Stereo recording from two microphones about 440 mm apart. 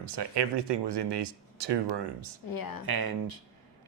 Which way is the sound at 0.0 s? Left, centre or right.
Right.